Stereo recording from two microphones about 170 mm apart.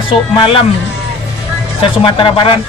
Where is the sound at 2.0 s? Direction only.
30° left (ahead or behind).